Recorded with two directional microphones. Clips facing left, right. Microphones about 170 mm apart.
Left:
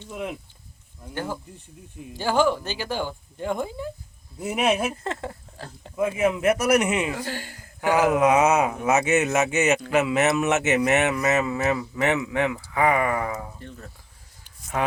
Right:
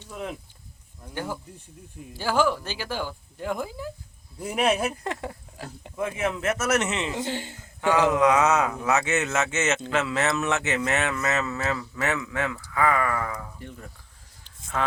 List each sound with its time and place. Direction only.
0.1 s speech: 10° left (ahead or behind)
2.0 s a man's voice: 5° right (ahead or behind)
5.0 s speech: 15° right (ahead or behind)
6.0 s a man's voice: 10° left (ahead or behind)
7.1 s speech: 20° right (ahead or behind)
7.8 s speech: 20° left (ahead or behind)
13.6 s speech: 10° right (ahead or behind)
14.4 s a sound: 15° left (ahead or behind)